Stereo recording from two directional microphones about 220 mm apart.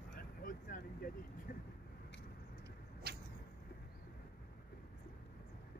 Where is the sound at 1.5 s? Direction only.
40° left (ahead or behind).